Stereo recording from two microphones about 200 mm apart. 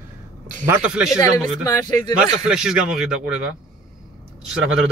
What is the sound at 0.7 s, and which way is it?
Speech, 5° right (ahead or behind).